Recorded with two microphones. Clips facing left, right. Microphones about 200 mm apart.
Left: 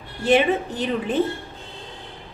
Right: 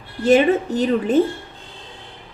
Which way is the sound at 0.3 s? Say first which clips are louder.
Right 4 dB; 40° right (ahead or behind).